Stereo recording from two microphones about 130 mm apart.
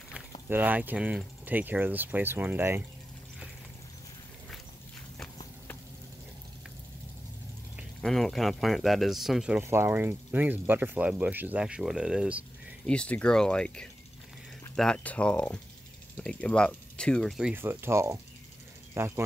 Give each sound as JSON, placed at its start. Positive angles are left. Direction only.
{"t": 0.1, "sound": "speech", "side_deg": -15}
{"t": 8.0, "sound": "speech", "side_deg": 5}
{"t": 9.6, "sound": "speech", "side_deg": -20}
{"t": 12.8, "sound": "speech", "side_deg": 5}
{"t": 17.4, "sound": "speech", "side_deg": -10}